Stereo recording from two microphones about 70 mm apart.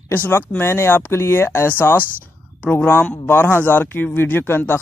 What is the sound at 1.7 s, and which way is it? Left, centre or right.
Speech, left.